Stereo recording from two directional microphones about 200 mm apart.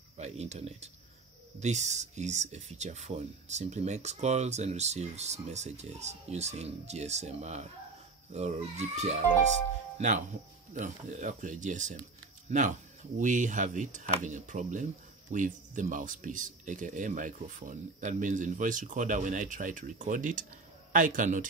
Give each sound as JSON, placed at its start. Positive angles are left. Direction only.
{"t": 0.2, "sound": "speech", "side_deg": -35}